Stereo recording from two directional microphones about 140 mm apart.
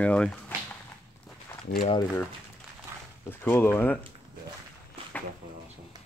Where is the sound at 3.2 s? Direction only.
15° left (ahead or behind).